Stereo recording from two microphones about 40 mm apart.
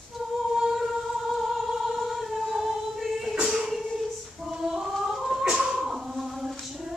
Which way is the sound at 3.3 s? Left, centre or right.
Right.